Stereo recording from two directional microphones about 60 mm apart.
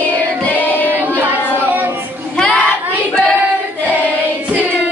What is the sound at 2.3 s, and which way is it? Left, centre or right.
Child singing, centre.